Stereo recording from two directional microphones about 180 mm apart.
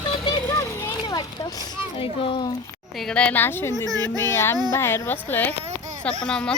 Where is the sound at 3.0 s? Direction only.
5° left (ahead or behind).